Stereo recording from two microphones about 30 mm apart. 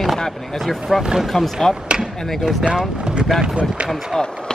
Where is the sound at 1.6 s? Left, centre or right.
Centre.